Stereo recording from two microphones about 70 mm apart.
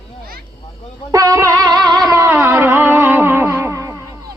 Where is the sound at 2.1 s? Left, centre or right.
Right.